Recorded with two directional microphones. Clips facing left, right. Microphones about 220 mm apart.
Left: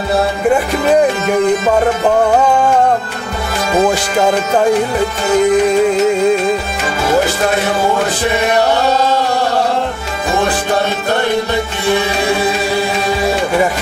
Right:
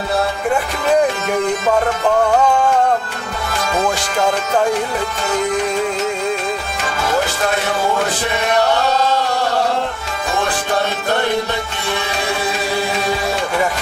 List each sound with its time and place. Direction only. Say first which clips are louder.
0.5 s music: left 6 dB; 5° left (ahead or behind)
2.5 s music: left 3 dB; 15° left (ahead or behind)
3.7 s music: left 7 dB; 5° left (ahead or behind)
8.0 s chant: left 5 dB; 5° left (ahead or behind)
10.3 s music: left 4 dB; 5° left (ahead or behind)